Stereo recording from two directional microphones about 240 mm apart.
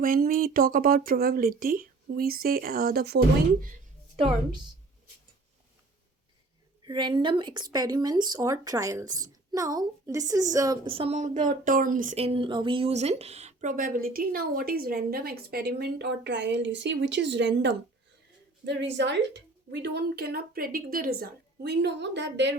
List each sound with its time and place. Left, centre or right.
0.0 s a woman's voice: right
6.8 s a woman's voice: centre; by 22.5 s right